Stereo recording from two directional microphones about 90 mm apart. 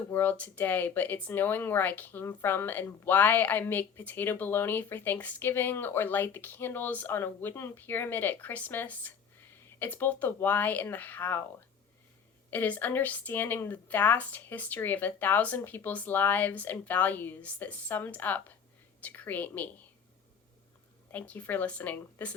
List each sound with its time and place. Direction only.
0.1 s speech: 20° left (ahead or behind)
12.5 s speech: 20° left (ahead or behind)
21.1 s speech: 20° left (ahead or behind)